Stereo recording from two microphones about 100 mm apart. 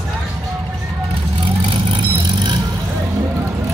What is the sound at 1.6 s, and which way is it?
Vehicle, 50° right (ahead or behind).